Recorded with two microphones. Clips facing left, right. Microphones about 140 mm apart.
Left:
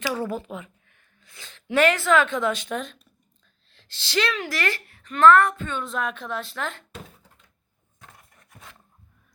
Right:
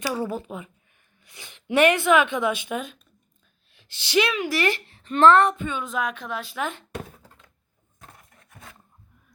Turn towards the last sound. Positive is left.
turn(degrees=-90)